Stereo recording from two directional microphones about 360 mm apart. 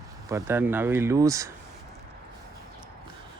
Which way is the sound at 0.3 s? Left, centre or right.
Centre.